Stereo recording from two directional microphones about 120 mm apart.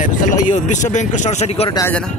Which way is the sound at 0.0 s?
90° left.